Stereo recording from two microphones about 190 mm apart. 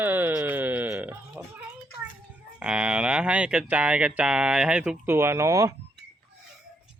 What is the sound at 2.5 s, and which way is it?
Speech, 5° right (ahead or behind).